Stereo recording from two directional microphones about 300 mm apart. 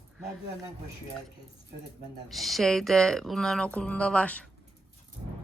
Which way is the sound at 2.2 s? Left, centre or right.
Centre.